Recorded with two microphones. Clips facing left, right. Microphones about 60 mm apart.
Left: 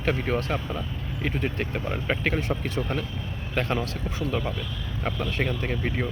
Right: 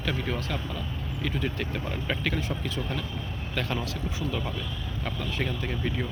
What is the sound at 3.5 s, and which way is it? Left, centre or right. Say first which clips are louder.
Speech: left 4 dB; left.